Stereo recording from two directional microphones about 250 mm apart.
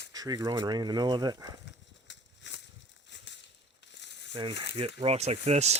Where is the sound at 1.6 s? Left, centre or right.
Left.